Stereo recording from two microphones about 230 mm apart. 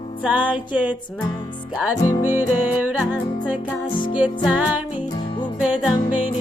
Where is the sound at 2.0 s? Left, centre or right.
Centre.